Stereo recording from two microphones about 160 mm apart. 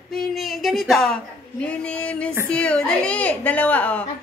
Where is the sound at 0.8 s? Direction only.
Centre (ahead or behind).